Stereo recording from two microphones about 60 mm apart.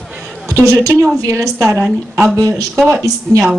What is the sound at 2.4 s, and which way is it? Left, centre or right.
Speech, right.